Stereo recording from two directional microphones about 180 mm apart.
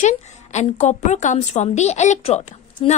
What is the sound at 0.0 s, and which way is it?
A woman's voice, 40° left (ahead or behind).